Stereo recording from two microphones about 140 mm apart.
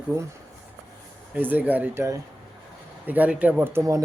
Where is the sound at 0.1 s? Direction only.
20° right (ahead or behind).